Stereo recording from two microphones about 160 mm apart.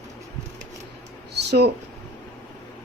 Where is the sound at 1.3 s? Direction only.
90° right.